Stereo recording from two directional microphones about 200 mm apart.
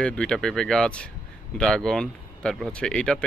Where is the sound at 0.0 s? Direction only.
5° left (ahead or behind).